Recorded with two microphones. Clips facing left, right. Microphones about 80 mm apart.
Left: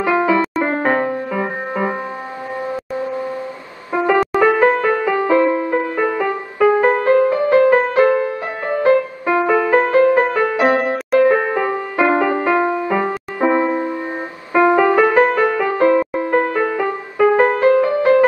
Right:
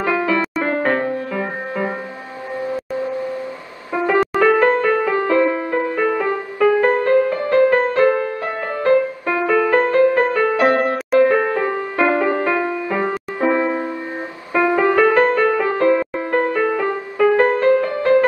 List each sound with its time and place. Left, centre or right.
0.0 s music: centre
4.4 s music: centre